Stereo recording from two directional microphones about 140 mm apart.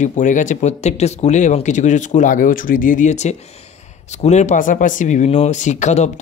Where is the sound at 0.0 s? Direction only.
65° left (ahead or behind).